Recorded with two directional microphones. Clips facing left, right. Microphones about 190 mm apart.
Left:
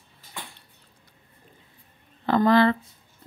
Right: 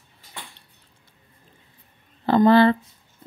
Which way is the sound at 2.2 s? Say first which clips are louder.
Right 4 dB; 30° right (ahead or behind).